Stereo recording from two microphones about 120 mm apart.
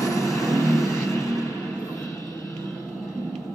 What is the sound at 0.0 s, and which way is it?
Vehicle, 25° left (ahead or behind).